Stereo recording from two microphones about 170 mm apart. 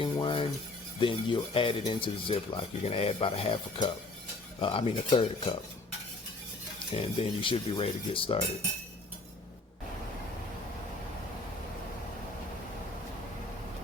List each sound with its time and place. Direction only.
0.0 s cutlery: 30° left (ahead or behind)
0.9 s speech: 30° left (ahead or behind)
6.9 s speech: 35° left (ahead or behind)